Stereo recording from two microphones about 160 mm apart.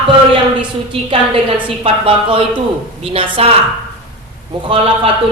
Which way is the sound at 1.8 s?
35° right (ahead or behind).